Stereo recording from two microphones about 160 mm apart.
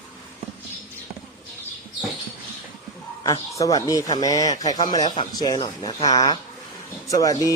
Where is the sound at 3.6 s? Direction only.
25° left (ahead or behind).